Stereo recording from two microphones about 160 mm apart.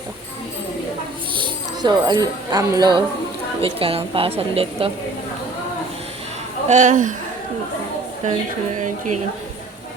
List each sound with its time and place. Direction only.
1.4 s speech: 25° right (ahead or behind)
3.6 s a woman's voice: 35° right (ahead or behind)
6.7 s speech: 50° right (ahead or behind)
8.2 s speech: 50° right (ahead or behind)